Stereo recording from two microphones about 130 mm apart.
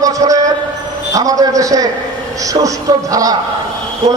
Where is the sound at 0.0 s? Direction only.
25° right (ahead or behind).